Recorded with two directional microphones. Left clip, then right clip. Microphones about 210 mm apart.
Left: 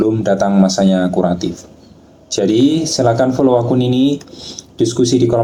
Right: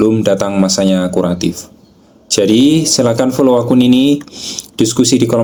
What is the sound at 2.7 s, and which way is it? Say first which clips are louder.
Speech: right 2 dB; 55° right (ahead or behind).